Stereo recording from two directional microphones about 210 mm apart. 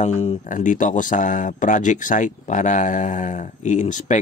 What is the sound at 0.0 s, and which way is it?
Speech, 35° left (ahead or behind).